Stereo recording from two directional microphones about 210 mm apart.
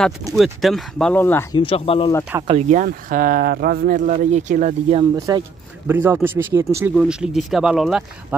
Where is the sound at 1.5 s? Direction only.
25° left (ahead or behind).